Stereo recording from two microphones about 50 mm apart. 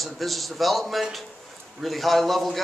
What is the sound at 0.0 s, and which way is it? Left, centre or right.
A man's voice, centre.